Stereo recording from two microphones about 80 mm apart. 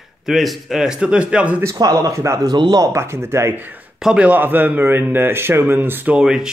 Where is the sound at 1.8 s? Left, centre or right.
Right.